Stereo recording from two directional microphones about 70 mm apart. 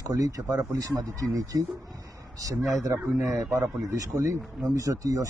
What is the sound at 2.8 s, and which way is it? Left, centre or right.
Speech, right.